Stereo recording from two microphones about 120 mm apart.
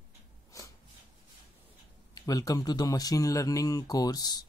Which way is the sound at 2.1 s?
30° left (ahead or behind).